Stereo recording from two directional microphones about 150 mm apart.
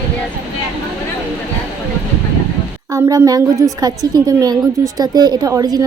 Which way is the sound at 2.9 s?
25° right (ahead or behind).